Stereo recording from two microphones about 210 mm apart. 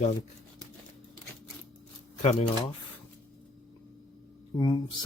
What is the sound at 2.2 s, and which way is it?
Speech, 30° left (ahead or behind).